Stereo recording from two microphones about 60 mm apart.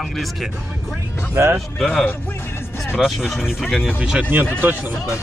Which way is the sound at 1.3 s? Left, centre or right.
Right.